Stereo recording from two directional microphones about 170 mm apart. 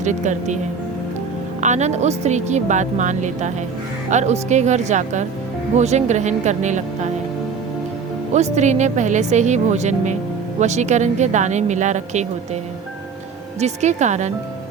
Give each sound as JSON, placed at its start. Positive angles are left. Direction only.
{"t": 0.0, "sound": "speech", "side_deg": -45}
{"t": 1.6, "sound": "speech", "side_deg": -45}
{"t": 8.3, "sound": "speech", "side_deg": -45}
{"t": 13.6, "sound": "speech", "side_deg": -40}